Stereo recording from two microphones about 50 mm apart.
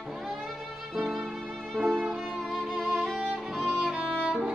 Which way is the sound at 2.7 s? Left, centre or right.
Centre.